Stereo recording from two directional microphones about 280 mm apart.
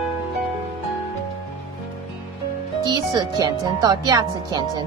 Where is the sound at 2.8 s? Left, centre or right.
Centre.